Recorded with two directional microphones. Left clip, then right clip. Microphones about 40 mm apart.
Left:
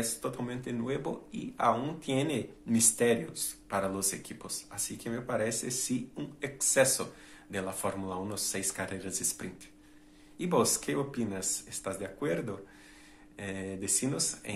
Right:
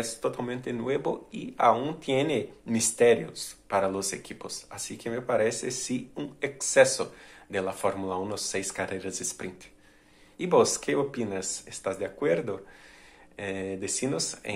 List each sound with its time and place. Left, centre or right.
0.0 s speech: right